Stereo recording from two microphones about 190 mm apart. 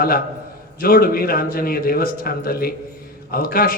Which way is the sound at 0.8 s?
50° left (ahead or behind).